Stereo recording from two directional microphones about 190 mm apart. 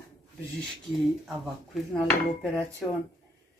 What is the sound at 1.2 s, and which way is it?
Speech, centre (ahead or behind).